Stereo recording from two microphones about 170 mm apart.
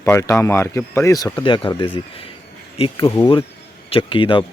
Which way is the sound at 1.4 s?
30° left (ahead or behind).